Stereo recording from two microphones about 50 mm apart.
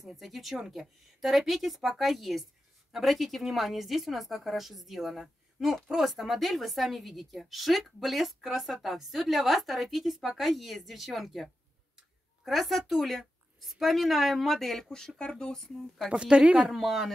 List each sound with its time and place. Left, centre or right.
0.0 s a woman's voice: centre
16.1 s a woman's voice: right
16.7 s a woman's voice: centre